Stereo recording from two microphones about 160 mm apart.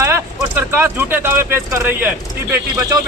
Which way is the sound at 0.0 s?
15° right (ahead or behind).